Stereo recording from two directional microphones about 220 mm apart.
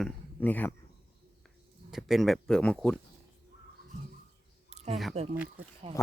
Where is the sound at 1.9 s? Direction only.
Centre (ahead or behind).